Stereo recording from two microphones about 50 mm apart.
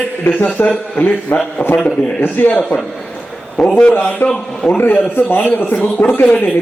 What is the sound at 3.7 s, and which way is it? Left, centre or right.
Speech, left.